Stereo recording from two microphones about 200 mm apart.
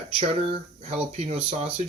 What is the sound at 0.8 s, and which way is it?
Speech, 30° right (ahead or behind).